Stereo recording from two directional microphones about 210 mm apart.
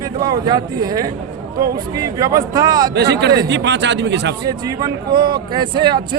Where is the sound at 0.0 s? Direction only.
20° right (ahead or behind).